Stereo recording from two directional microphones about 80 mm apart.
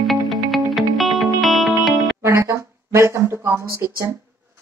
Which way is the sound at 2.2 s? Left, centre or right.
Right.